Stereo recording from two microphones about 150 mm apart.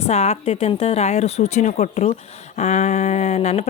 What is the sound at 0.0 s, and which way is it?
A woman's voice, 45° left (ahead or behind).